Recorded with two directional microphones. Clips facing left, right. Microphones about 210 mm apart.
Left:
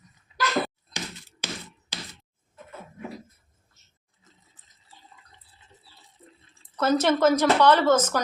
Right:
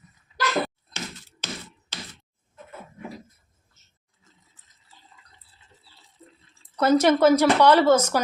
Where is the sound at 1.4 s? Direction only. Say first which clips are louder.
Even; 10° left (ahead or behind).